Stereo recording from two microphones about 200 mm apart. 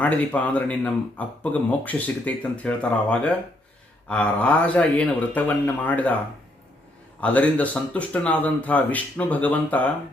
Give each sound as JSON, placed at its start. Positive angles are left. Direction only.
{"t": 0.0, "sound": "speech", "side_deg": 5}
{"t": 7.2, "sound": "speech", "side_deg": 5}